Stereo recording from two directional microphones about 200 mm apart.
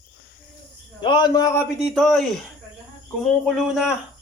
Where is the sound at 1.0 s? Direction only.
20° left (ahead or behind).